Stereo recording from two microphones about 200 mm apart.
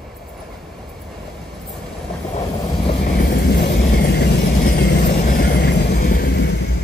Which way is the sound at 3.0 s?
50° left (ahead or behind).